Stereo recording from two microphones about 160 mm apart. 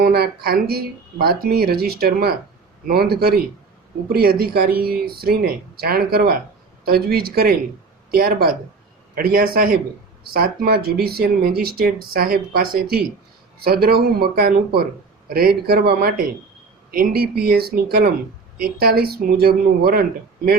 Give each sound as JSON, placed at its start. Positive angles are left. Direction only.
{"t": 0.0, "sound": "speech", "side_deg": -75}
{"t": 15.3, "sound": "speech", "side_deg": -70}